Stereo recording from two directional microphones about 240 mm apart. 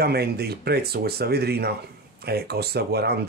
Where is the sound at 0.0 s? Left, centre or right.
Right.